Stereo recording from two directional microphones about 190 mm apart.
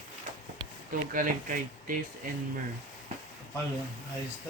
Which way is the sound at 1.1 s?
45° right (ahead or behind).